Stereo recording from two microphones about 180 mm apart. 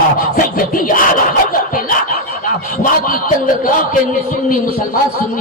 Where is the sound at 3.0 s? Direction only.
50° left (ahead or behind).